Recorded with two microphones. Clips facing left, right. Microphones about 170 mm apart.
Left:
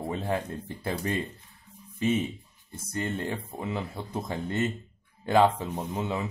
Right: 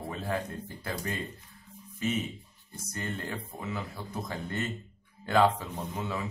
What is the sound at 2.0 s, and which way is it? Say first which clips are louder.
Speech: left 5 dB; 30° left (ahead or behind).